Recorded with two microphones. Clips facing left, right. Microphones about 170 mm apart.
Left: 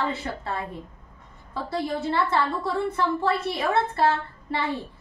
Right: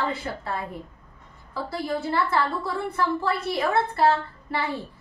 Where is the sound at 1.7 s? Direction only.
25° left (ahead or behind).